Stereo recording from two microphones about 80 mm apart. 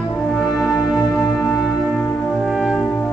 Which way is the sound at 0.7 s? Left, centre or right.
Left.